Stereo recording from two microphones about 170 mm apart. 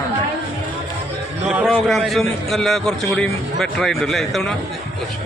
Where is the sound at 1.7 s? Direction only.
Centre (ahead or behind).